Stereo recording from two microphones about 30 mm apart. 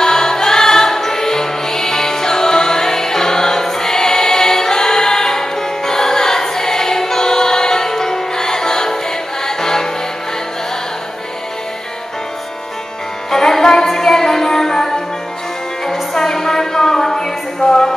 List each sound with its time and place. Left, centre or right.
0.0 s music: centre
13.3 s music: centre